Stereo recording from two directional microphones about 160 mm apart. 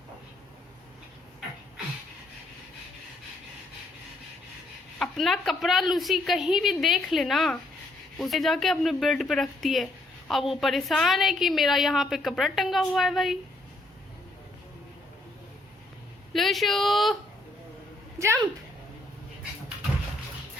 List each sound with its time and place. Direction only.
4.9 s speech: centre (ahead or behind)
16.3 s a woman's voice: centre (ahead or behind)
18.2 s speech: 15° right (ahead or behind)